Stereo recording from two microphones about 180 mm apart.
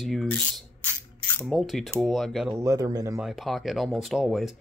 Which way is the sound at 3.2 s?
Centre (ahead or behind).